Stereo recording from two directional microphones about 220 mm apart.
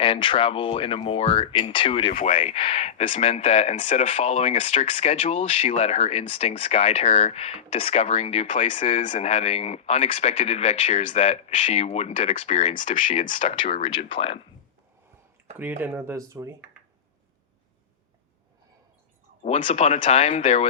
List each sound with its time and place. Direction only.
0.0 s speech: 25° left (ahead or behind)
15.5 s speech: 10° right (ahead or behind)
19.4 s speech: 35° left (ahead or behind)